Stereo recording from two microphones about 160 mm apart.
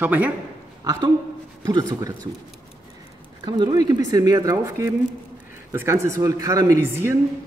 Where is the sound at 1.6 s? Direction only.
25° right (ahead or behind).